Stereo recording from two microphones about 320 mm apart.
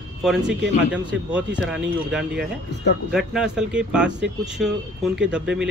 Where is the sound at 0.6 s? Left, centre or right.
Right.